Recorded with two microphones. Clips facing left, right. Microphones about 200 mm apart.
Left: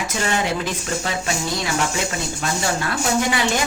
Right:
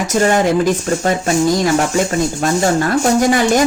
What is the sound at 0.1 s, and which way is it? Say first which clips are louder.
Speech: right 11 dB; 45° right (ahead or behind).